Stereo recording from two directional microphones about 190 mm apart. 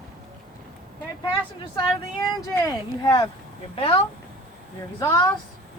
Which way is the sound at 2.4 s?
20° left (ahead or behind).